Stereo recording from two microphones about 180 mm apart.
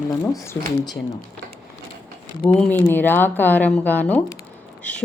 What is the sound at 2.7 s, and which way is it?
A woman's voice, 10° left (ahead or behind).